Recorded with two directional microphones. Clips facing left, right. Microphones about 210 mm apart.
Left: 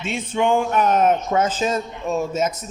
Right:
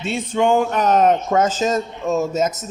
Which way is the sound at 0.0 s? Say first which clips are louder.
Right 3 dB; 40° right (ahead or behind).